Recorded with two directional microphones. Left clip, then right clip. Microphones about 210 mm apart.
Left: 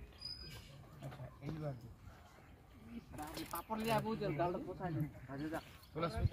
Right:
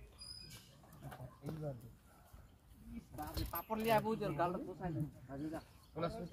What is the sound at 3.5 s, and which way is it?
Speech, 35° right (ahead or behind).